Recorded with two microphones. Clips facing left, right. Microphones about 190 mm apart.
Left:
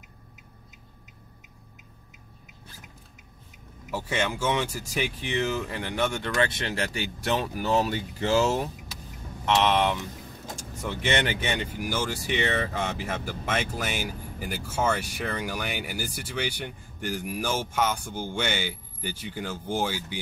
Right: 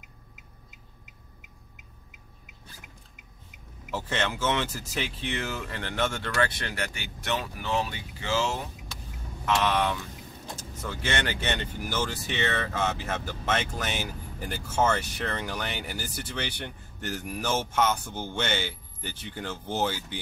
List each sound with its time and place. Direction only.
3.9 s speech: 10° left (ahead or behind); by 7.4 s 30° left (ahead or behind)
7.4 s speech: 40° left (ahead or behind)
9.6 s speech: 25° left (ahead or behind)